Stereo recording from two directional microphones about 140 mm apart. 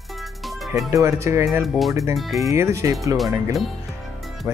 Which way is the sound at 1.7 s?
Centre (ahead or behind).